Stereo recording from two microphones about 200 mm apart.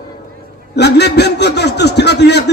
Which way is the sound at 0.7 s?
55° left (ahead or behind).